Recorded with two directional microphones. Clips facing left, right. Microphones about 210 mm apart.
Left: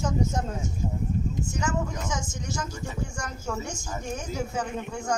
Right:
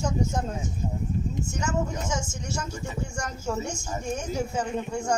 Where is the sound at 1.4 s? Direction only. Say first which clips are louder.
Right 2 dB; 25° right (ahead or behind).